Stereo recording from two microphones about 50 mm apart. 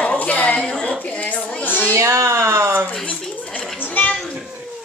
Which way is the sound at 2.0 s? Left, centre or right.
Right.